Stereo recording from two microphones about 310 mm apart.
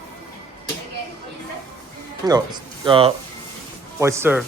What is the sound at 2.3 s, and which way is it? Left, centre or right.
Cutlery, centre.